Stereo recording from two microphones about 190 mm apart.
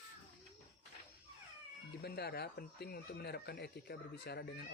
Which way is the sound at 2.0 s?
55° left (ahead or behind).